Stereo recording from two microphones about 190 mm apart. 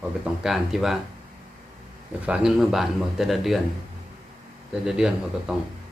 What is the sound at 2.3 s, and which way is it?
Speech, 5° right (ahead or behind).